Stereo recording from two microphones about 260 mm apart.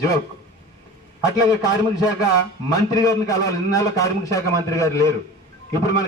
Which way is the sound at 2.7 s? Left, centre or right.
Centre.